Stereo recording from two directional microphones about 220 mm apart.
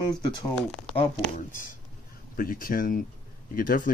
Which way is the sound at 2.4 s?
40° left (ahead or behind).